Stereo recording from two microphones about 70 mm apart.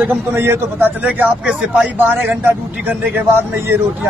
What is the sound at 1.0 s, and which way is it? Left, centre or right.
Speech, centre.